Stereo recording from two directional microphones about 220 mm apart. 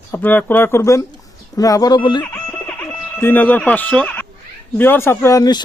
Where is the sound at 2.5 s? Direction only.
10° left (ahead or behind).